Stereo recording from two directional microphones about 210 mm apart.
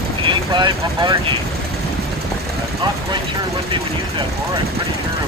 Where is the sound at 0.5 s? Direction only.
20° right (ahead or behind).